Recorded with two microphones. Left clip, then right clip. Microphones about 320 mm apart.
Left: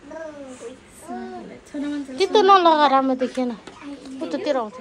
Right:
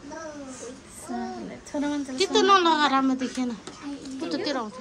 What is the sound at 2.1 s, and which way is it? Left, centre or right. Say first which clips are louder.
A woman's voice: left 5 dB; centre.